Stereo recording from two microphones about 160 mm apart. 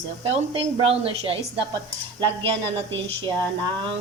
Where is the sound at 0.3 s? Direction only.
35° right (ahead or behind).